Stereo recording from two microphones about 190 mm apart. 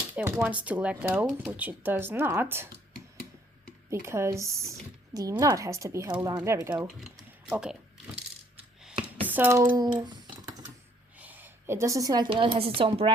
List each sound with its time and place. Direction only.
0.2 s speech: 10° right (ahead or behind)
3.8 s speech: 15° right (ahead or behind)
6.8 s speech: 5° right (ahead or behind)
9.2 s speech: 10° right (ahead or behind)
11.2 s a woman's voice: 10° right (ahead or behind); by 13.1 s 30° right (ahead or behind)